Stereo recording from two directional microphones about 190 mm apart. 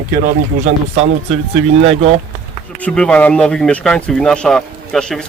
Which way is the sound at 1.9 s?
30° right (ahead or behind).